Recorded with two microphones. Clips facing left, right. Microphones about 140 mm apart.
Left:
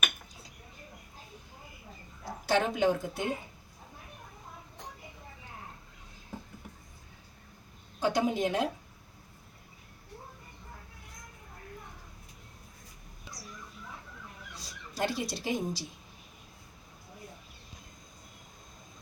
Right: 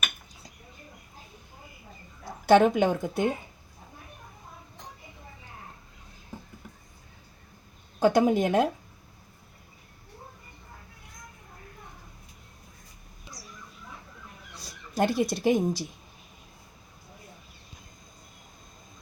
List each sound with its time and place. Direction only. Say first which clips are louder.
2.5 s speech: right 7 dB; 55° right (ahead or behind)
7.9 s a woman's voice: right 7 dB; 50° right (ahead or behind)
14.5 s speech: right 11 dB; 55° right (ahead or behind)